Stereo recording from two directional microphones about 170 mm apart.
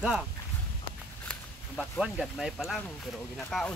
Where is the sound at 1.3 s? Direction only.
Centre (ahead or behind).